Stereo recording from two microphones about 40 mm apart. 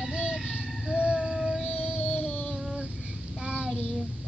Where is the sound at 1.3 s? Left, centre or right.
Centre.